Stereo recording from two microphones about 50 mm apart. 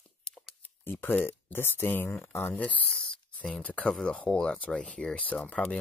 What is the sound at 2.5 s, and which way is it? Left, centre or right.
Speech, left.